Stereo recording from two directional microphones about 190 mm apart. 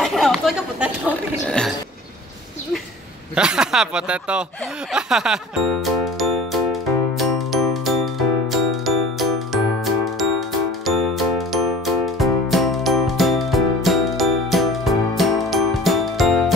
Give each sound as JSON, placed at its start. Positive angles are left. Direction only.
{"t": 0.0, "sound": "chatter", "side_deg": 0}
{"t": 3.3, "sound": "speech", "side_deg": -5}
{"t": 4.9, "sound": "music", "side_deg": -5}